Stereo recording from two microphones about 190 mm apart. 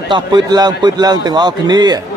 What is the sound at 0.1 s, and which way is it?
A man's voice, 20° right (ahead or behind).